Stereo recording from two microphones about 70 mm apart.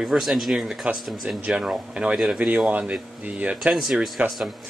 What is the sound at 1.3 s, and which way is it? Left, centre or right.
Speech, centre.